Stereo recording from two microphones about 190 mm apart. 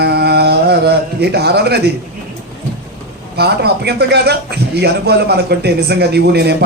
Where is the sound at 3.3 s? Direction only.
60° right (ahead or behind).